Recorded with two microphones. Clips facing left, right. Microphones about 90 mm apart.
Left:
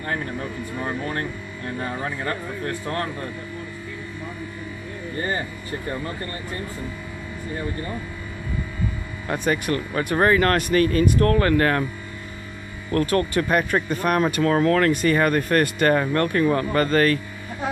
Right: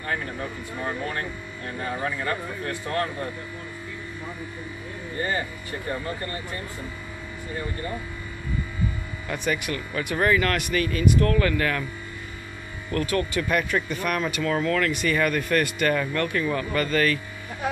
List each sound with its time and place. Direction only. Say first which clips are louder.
9.3 s speech: left 5 dB; 40° left (ahead or behind)
12.9 s speech: left 4 dB; 40° left (ahead or behind)